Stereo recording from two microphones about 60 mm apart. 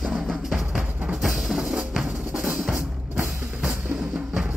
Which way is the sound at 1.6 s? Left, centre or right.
Centre.